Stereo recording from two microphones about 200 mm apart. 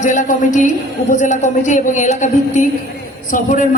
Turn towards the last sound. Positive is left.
turn(degrees=40)  # may be behind; listen again after turning